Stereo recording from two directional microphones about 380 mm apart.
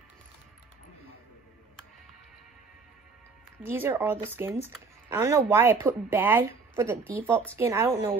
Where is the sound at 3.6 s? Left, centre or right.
Centre.